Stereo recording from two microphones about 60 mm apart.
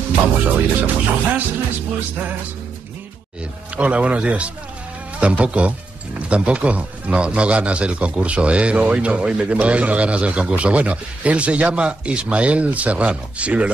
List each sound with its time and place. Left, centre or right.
0.5 s speech: right
3.7 s speech: right